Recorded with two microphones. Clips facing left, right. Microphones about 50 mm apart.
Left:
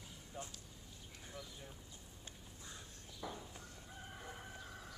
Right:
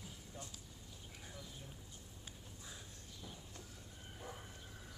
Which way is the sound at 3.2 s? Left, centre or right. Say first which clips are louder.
Left 8 dB; left.